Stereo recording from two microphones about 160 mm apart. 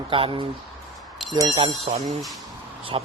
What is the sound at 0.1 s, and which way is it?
Speech, 35° right (ahead or behind).